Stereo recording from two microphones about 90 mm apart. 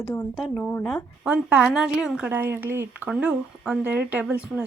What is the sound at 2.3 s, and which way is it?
Speech, 20° right (ahead or behind).